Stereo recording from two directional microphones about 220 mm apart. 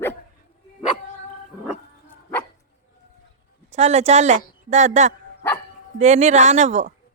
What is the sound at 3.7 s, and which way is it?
A woman's voice, 30° right (ahead or behind).